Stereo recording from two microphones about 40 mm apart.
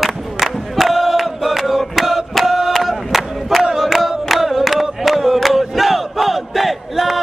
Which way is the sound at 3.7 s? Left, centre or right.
Centre.